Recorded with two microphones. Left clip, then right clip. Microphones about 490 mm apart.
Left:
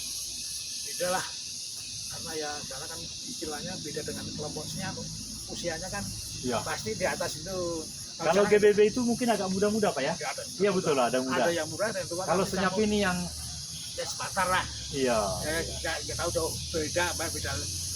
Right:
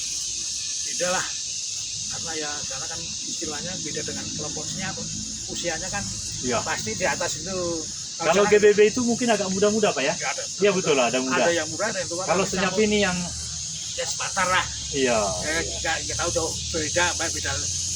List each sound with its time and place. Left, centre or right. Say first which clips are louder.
0.9 s speech: right 4 dB; left
6.5 s speech: right 5 dB; left
14.3 s speech: right 5 dB; left